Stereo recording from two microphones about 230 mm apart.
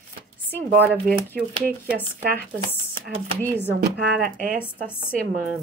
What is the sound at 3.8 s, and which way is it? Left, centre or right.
Speech, right.